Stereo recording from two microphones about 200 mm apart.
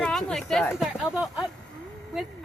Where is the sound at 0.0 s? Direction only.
Centre (ahead or behind).